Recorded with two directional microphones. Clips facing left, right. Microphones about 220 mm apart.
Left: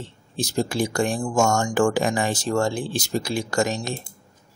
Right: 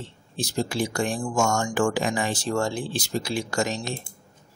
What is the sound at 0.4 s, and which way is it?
Speech, 45° left (ahead or behind).